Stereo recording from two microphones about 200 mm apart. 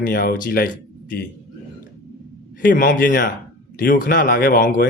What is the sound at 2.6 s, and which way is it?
Speech, 45° left (ahead or behind).